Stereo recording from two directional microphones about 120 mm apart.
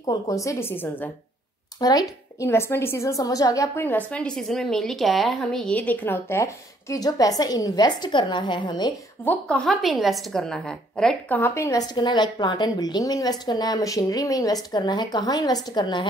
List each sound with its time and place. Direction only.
0.3 s a woman's voice: 25° left (ahead or behind)
1.8 s a woman's voice: 30° left (ahead or behind)
9.2 s a woman's voice: 15° left (ahead or behind)
9.7 s a woman's voice: centre (ahead or behind); by 11.8 s 25° left (ahead or behind)
11.9 s a woman's voice: 40° left (ahead or behind)